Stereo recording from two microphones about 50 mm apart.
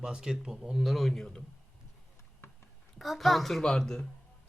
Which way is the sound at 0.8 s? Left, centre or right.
Centre.